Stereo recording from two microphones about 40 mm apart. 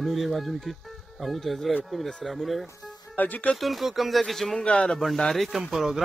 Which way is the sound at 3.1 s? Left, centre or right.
Left.